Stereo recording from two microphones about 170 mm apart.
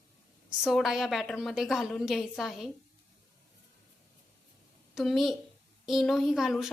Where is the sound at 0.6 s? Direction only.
Centre (ahead or behind).